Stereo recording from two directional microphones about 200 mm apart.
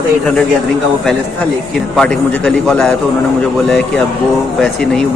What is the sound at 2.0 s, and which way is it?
Speech, 5° left (ahead or behind).